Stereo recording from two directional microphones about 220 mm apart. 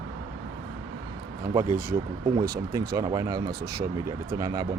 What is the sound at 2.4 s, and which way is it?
Speech, 15° right (ahead or behind).